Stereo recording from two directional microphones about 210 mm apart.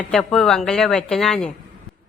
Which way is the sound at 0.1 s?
Centre (ahead or behind).